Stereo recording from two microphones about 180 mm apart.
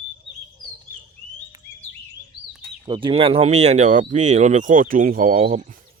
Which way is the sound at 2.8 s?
25° right (ahead or behind).